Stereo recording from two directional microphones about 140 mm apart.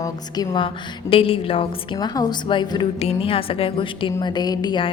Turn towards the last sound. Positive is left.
turn(degrees=30)  # may be behind; listen again after turning